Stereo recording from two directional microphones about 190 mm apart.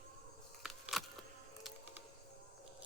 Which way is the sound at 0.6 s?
Centre (ahead or behind).